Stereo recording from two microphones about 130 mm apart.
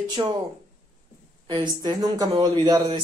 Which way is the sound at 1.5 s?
30° right (ahead or behind).